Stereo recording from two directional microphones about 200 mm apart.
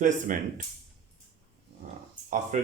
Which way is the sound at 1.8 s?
40° right (ahead or behind).